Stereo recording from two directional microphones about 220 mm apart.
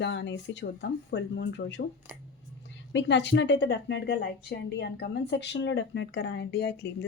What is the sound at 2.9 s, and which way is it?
A woman's voice, 55° left (ahead or behind).